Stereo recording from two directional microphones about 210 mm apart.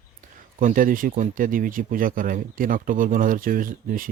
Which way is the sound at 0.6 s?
40° right (ahead or behind).